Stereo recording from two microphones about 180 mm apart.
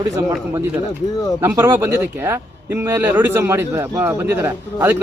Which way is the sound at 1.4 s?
15° right (ahead or behind).